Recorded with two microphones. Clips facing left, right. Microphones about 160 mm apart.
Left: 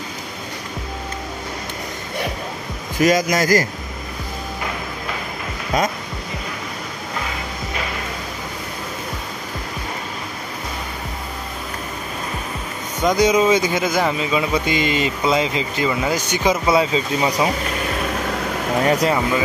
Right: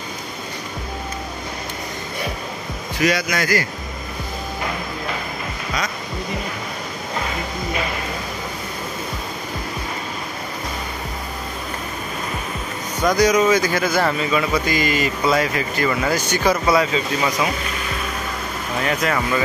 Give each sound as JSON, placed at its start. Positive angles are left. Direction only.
{"t": 3.0, "sound": "a man's voice", "side_deg": 45}
{"t": 13.0, "sound": "speech", "side_deg": 20}
{"t": 18.9, "sound": "a man's voice", "side_deg": 35}